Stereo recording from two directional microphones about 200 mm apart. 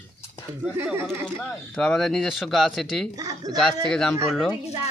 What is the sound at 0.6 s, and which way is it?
Speech, 10° right (ahead or behind).